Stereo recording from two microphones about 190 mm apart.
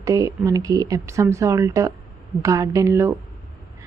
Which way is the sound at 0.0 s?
15° right (ahead or behind).